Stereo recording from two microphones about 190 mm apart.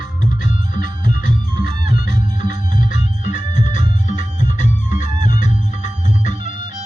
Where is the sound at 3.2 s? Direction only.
40° left (ahead or behind).